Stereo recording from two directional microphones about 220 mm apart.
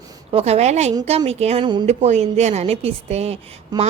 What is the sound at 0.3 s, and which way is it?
A woman's voice, 25° right (ahead or behind).